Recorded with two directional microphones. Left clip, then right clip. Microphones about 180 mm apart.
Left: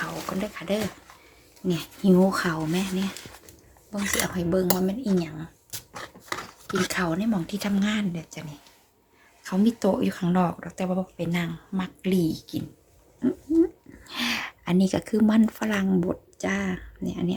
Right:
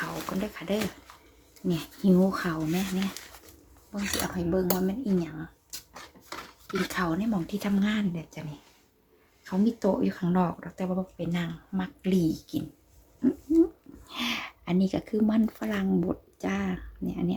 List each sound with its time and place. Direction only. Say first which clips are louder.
0.0 s speech: left 2 dB; centre (ahead or behind)
6.8 s speech: left 2 dB; 5° left (ahead or behind)
14.1 s speech: left 4 dB; 5° left (ahead or behind)